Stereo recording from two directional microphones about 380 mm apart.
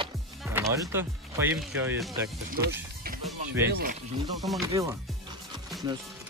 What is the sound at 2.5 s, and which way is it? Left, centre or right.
Speech, right.